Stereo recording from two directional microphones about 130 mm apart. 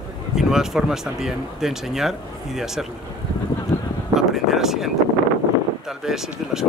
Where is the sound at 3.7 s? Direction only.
20° left (ahead or behind).